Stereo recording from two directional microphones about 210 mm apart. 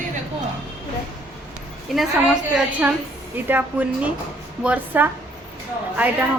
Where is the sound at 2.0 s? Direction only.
Centre (ahead or behind).